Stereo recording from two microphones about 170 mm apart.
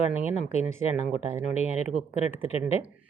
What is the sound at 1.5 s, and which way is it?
Speech, 40° left (ahead or behind).